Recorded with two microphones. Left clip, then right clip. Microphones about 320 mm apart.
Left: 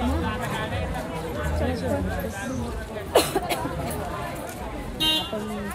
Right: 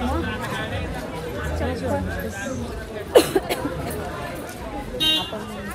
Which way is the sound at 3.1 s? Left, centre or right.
Left.